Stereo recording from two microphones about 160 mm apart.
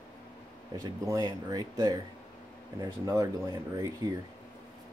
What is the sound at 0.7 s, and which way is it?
Speech, 20° right (ahead or behind).